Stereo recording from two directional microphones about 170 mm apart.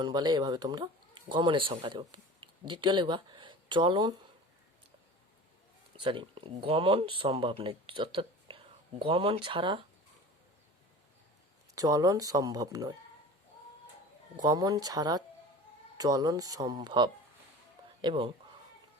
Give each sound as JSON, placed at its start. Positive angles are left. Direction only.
{"t": 0.0, "sound": "speech", "side_deg": -25}
{"t": 6.0, "sound": "speech", "side_deg": -30}
{"t": 11.7, "sound": "speech", "side_deg": -20}
{"t": 14.4, "sound": "speech", "side_deg": -25}